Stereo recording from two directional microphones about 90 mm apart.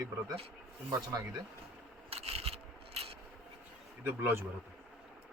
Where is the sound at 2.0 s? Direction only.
90° right.